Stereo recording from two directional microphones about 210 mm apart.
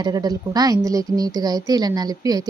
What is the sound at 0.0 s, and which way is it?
A woman's voice, 20° right (ahead or behind).